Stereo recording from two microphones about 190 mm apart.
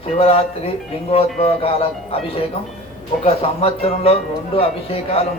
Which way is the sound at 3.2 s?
30° left (ahead or behind).